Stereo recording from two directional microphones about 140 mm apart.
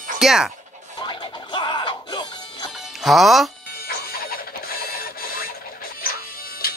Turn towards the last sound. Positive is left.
turn(degrees=90)